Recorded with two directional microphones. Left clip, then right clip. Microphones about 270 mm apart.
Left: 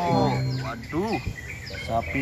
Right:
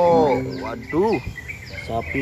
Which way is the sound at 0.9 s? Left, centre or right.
Left.